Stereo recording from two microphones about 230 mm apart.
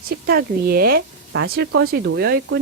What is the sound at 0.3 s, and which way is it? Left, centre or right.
A woman's voice, right.